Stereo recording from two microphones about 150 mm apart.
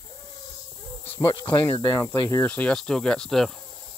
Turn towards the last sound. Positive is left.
turn(degrees=5)  # may be behind; listen again after turning